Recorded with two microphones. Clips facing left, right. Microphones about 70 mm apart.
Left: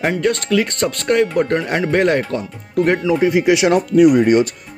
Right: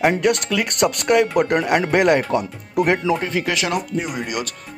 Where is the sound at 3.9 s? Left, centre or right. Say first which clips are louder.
Left 14 dB; left.